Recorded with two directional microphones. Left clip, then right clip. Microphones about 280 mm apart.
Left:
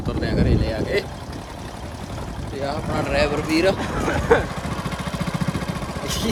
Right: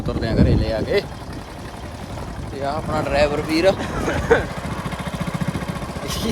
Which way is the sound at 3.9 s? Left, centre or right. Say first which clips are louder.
Even; left.